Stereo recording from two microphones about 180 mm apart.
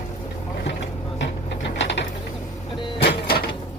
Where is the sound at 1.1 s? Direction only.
80° left.